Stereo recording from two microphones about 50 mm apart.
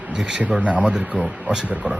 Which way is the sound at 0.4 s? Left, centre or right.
Right.